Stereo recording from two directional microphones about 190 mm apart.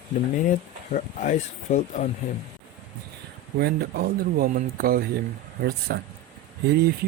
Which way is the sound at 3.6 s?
60° right (ahead or behind).